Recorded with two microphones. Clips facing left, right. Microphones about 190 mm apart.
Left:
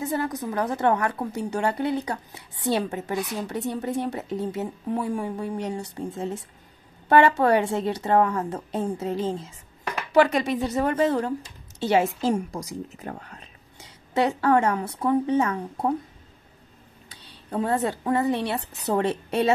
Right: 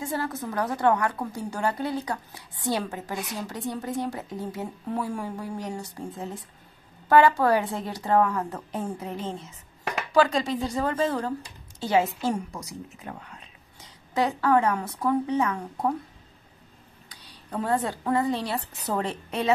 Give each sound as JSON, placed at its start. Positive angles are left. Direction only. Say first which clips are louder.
{"t": 0.0, "sound": "a woman's voice", "louder": "left 3 dB", "side_deg": 20}
{"t": 12.4, "sound": "speech", "louder": "left 5 dB", "side_deg": 90}
{"t": 13.0, "sound": "speech", "louder": "left 3 dB", "side_deg": 45}
{"t": 13.7, "sound": "a woman's voice", "louder": "left 2 dB", "side_deg": 25}
{"t": 17.6, "sound": "a woman's voice", "louder": "left 2 dB", "side_deg": 20}